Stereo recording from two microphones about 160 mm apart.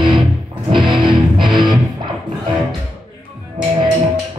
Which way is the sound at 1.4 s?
30° right (ahead or behind).